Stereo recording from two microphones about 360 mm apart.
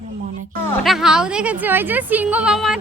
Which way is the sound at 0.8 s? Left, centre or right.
Centre.